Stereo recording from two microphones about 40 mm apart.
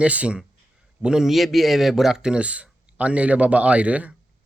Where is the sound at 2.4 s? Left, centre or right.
Right.